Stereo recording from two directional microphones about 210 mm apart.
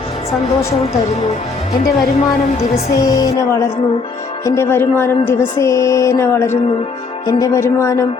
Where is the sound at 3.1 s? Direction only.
15° left (ahead or behind).